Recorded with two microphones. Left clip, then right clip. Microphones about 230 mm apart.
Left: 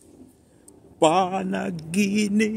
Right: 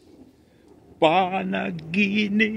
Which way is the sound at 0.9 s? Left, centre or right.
Centre.